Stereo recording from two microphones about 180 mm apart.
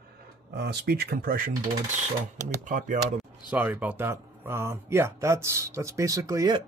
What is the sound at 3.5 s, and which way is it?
Speech, 10° right (ahead or behind).